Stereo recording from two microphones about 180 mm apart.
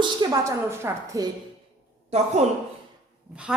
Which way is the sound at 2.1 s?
35° right (ahead or behind).